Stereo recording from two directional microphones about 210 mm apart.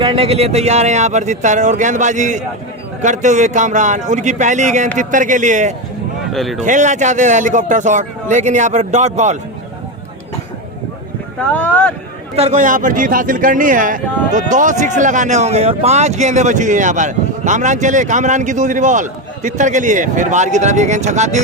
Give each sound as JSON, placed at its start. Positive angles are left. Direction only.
{"t": 0.0, "sound": "a man's voice", "side_deg": -25}
{"t": 6.3, "sound": "speech", "side_deg": 0}
{"t": 6.6, "sound": "a man's voice", "side_deg": -35}
{"t": 11.5, "sound": "speech", "side_deg": 5}
{"t": 12.4, "sound": "a man's voice", "side_deg": -35}